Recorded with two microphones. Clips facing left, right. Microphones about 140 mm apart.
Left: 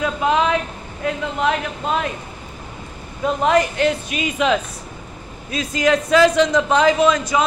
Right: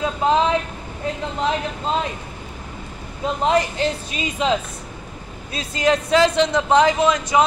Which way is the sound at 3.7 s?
30° right (ahead or behind).